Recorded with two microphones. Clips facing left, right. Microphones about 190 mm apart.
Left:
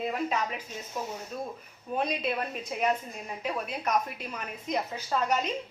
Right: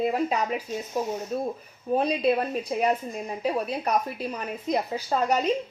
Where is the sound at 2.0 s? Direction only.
35° right (ahead or behind).